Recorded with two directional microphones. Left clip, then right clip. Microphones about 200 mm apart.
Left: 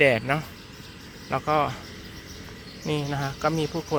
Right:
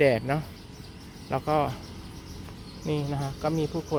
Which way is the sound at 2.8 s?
Centre (ahead or behind).